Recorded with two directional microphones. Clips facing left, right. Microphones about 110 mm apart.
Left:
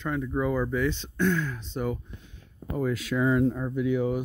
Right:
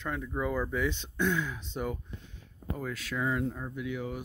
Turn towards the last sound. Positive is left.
turn(degrees=25)  # may be behind; listen again after turning